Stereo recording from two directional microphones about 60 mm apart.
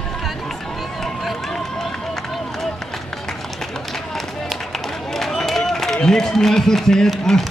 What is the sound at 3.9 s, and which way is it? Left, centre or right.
Run, centre.